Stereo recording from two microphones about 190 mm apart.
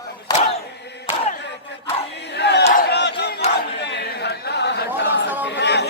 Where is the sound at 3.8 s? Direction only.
65° left (ahead or behind).